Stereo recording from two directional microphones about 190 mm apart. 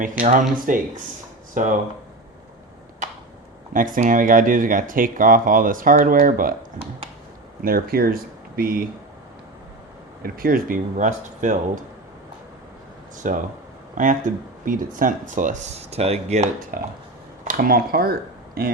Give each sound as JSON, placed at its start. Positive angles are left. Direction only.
{"t": 0.0, "sound": "speech", "side_deg": -45}
{"t": 3.7, "sound": "speech", "side_deg": -45}
{"t": 7.6, "sound": "speech", "side_deg": -50}
{"t": 10.2, "sound": "speech", "side_deg": -50}
{"t": 13.2, "sound": "speech", "side_deg": -40}